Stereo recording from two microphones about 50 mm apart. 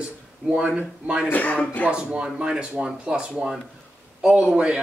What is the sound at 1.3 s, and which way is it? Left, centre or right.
Speech, left.